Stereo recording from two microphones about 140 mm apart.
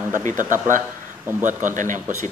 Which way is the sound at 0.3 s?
70° right (ahead or behind).